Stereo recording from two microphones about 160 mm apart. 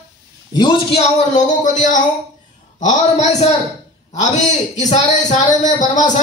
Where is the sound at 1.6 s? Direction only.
50° left (ahead or behind).